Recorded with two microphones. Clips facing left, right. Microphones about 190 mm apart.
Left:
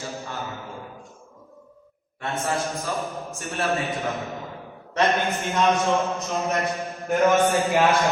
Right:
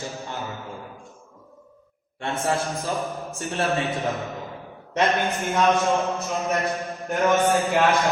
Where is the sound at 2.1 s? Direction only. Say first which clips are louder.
Right 1 dB; 30° right (ahead or behind).